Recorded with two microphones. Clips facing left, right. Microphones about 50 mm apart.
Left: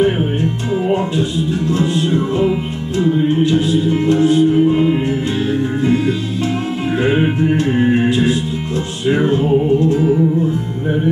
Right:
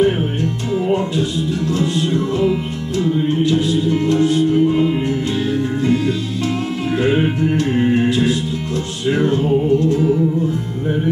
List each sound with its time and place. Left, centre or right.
0.0 s music: centre